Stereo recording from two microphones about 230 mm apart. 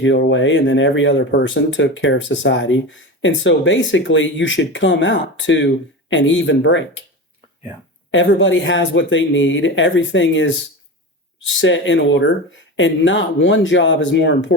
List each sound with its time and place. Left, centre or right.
0.0 s speech: left
8.1 s speech: left